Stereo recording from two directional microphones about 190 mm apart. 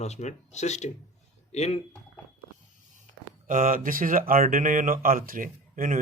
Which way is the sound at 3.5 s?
45° right (ahead or behind).